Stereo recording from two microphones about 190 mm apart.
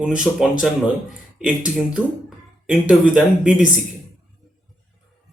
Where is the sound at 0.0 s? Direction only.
5° right (ahead or behind).